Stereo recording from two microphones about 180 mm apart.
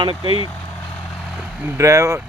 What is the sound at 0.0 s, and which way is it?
Speech, 30° right (ahead or behind).